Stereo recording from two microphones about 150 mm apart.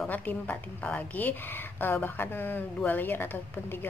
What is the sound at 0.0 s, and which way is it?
A woman's voice, 10° left (ahead or behind).